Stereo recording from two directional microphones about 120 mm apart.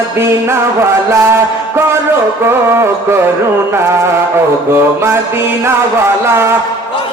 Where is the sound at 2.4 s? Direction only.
20° right (ahead or behind).